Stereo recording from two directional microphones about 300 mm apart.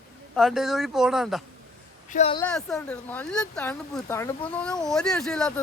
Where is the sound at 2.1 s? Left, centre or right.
Centre.